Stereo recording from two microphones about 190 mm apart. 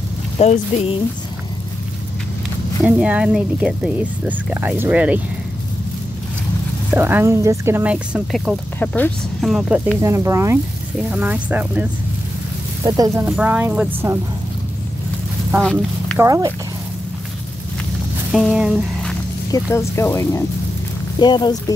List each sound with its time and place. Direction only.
0.4 s speech: 35° left (ahead or behind)
2.8 s a woman's voice: 5° right (ahead or behind)
6.9 s a woman's voice: 10° right (ahead or behind)
8.7 s speech: 10° left (ahead or behind)
10.0 s a woman's voice: 15° right (ahead or behind)
12.8 s speech: 20° right (ahead or behind)
13.2 s a woman's voice: 10° right (ahead or behind)
15.6 s speech: 5° left (ahead or behind)
16.2 s a woman's voice: 15° right (ahead or behind)
18.3 s speech: centre (ahead or behind)
19.5 s speech: 15° left (ahead or behind)